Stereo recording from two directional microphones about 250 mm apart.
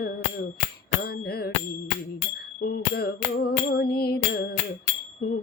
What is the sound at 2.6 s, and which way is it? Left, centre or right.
Music, left.